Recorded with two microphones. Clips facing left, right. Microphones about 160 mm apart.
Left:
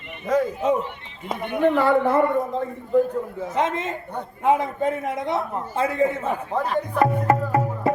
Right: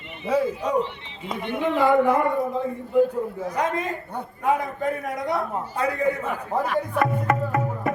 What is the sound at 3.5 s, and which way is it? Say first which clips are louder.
A man's voice: left 3 dB; 25° left (ahead or behind).